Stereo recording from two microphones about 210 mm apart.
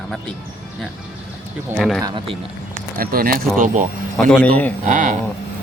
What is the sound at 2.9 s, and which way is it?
Speech, 45° right (ahead or behind).